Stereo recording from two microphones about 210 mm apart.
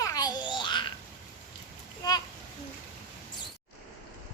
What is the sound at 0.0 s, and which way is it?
Babbling, 15° left (ahead or behind).